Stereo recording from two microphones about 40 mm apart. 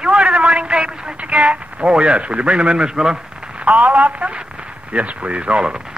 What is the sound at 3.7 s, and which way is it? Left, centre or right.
Speech, right.